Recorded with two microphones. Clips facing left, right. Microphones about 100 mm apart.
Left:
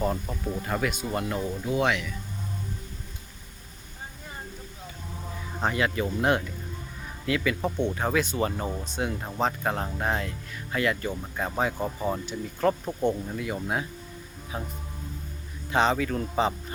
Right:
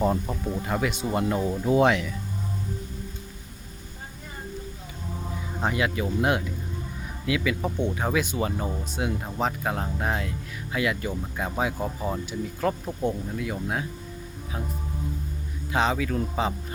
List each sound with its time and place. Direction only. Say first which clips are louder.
0.0 s speech: right 4 dB; 20° right (ahead or behind)
0.4 s speech: even; 10° right (ahead or behind)
0.9 s speech: right 4 dB; 20° right (ahead or behind)
5.5 s speech: even; 5° right (ahead or behind)
15.7 s speech: left 1 dB; centre (ahead or behind)